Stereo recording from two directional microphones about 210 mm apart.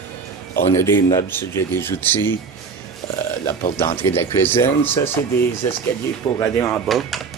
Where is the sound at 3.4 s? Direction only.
15° left (ahead or behind).